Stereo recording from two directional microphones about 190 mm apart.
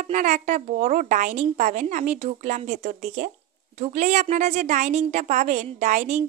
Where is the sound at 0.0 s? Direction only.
40° right (ahead or behind).